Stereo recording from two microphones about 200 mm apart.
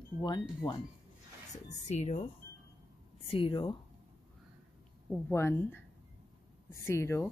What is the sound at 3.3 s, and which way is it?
Speech, 25° left (ahead or behind).